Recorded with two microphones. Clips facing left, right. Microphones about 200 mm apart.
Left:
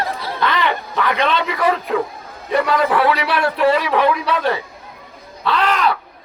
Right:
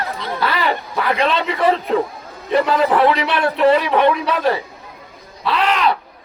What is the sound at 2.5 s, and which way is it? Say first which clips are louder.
A man's voice: right 1 dB; 30° right (ahead or behind).